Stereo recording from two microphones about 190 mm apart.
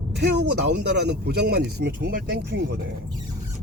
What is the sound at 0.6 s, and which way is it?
Speech, 60° right (ahead or behind).